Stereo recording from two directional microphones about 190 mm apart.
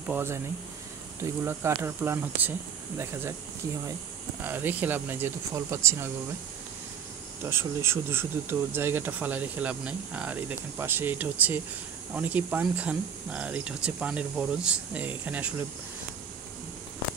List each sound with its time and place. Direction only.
0.1 s speech: 15° right (ahead or behind)
1.4 s speech: 15° right (ahead or behind)
4.4 s speech: 10° right (ahead or behind)
7.4 s speech: 15° right (ahead or behind)